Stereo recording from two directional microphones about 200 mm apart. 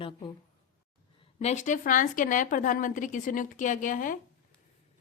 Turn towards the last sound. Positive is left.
turn(degrees=40)  # may be behind; listen again after turning